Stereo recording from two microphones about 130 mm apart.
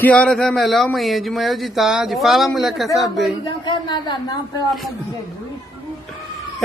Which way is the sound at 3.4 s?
35° left (ahead or behind).